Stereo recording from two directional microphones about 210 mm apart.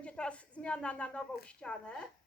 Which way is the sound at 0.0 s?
5° left (ahead or behind).